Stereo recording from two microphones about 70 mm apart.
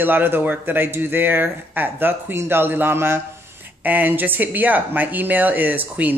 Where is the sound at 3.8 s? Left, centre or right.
Right.